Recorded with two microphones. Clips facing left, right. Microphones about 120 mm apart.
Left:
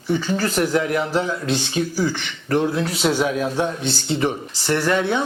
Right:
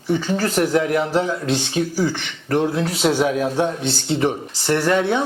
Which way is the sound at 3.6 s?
60° right (ahead or behind).